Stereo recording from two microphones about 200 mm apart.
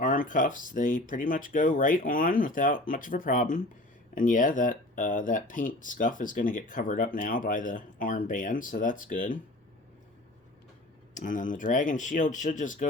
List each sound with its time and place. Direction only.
0.0 s speech: 40° left (ahead or behind)
11.1 s speech: 40° left (ahead or behind)